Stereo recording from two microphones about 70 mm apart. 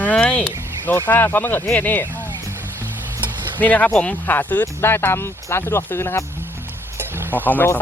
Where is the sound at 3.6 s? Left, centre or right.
Left.